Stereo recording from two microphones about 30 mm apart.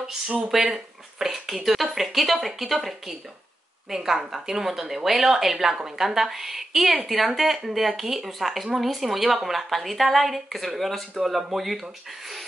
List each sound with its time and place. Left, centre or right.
0.5 s a woman's voice: centre
5.8 s a woman's voice: centre
11.1 s a woman's voice: centre